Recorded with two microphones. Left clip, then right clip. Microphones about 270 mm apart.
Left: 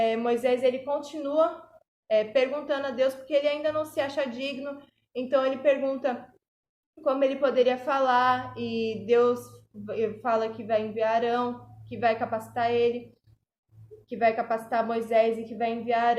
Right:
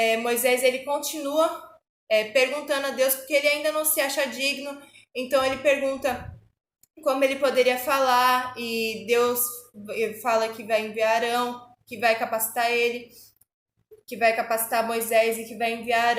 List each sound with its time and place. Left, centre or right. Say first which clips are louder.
0.0 s a sound: right 2 dB; centre
7.0 s a woman's voice: right 2 dB; centre
14.1 s a woman's voice: right 2 dB; centre